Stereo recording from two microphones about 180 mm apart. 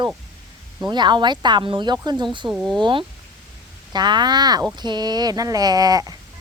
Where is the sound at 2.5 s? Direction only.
5° right (ahead or behind).